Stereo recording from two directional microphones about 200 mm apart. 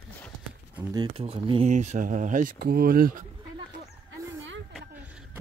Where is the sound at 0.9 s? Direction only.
25° right (ahead or behind); by 3.2 s 45° right (ahead or behind).